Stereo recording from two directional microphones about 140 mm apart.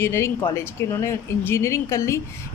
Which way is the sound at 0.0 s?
20° left (ahead or behind).